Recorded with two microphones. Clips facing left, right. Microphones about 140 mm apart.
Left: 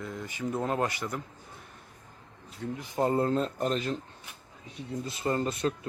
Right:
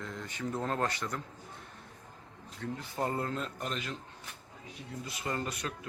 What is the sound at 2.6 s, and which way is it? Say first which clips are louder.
Speech: left 6 dB; 20° left (ahead or behind).